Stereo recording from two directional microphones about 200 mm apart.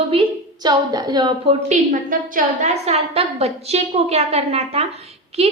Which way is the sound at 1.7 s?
40° right (ahead or behind).